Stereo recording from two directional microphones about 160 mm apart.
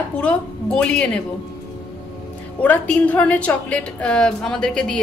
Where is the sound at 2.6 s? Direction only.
10° left (ahead or behind).